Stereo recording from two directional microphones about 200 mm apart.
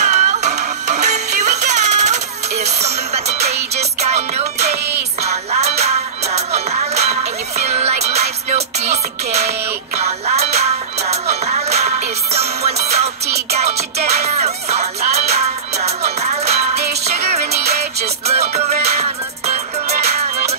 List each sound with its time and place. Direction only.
0.0 s music: 35° right (ahead or behind)